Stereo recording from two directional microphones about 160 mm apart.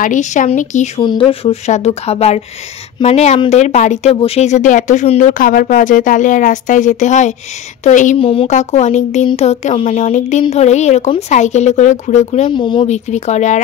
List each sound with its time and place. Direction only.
0.0 s speech: 50° left (ahead or behind)
1.0 s speech: 30° left (ahead or behind); by 5.3 s 45° left (ahead or behind)
5.4 s speech: 60° left (ahead or behind)
8.2 s speech: 35° left (ahead or behind)
8.5 s speech: 45° left (ahead or behind)
12.5 s speech: 30° left (ahead or behind)
12.8 s speech: 45° left (ahead or behind)